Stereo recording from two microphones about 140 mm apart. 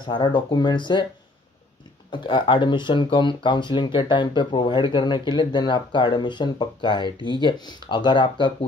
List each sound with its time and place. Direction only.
0.0 s speech: 35° left (ahead or behind)
2.0 s speech: 35° left (ahead or behind)